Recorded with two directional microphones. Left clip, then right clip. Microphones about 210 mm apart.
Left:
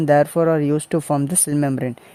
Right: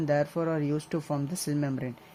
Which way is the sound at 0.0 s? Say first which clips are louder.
Left 12 dB; 45° left (ahead or behind).